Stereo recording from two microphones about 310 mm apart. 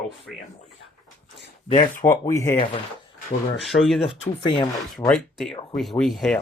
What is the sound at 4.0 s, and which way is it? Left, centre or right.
Speech, centre.